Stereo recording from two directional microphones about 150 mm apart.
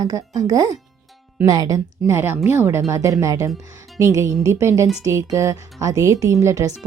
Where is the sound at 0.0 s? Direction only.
25° right (ahead or behind).